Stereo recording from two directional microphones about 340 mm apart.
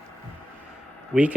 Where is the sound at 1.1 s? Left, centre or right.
Centre.